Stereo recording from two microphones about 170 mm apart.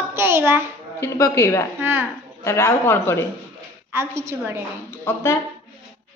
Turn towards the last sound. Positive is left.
turn(degrees=15)  # may be behind; listen again after turning